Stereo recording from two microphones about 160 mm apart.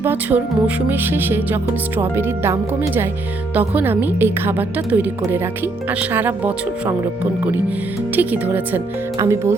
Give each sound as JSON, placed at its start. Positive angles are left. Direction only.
{"t": 0.0, "sound": "a woman's voice", "side_deg": -10}
{"t": 8.1, "sound": "a woman's voice", "side_deg": -10}